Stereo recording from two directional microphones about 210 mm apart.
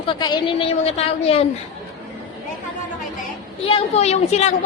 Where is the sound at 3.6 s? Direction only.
30° left (ahead or behind).